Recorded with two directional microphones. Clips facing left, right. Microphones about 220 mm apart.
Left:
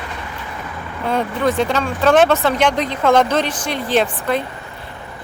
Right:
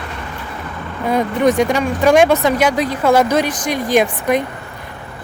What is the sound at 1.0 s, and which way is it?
Speech, 15° right (ahead or behind).